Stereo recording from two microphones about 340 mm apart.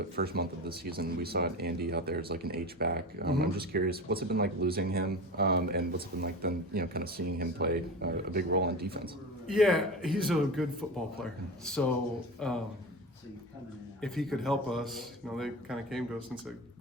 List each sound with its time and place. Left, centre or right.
0.2 s speech: right
9.5 s speech: centre
12.4 s speech: centre
14.0 s speech: centre